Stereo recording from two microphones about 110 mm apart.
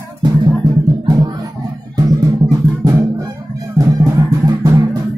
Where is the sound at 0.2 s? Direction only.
40° right (ahead or behind).